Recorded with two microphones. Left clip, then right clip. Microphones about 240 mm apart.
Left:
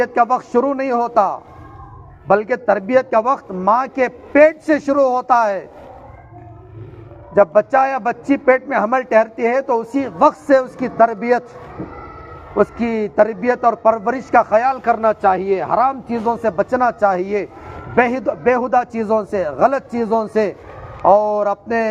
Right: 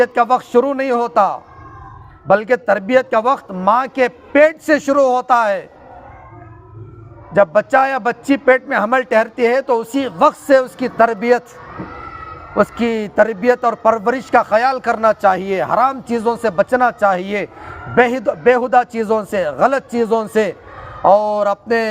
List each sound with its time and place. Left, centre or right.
0.0 s a man's voice: right
7.3 s a man's voice: right
12.5 s a man's voice: right